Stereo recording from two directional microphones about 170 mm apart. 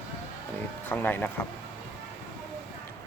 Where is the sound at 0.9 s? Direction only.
10° left (ahead or behind).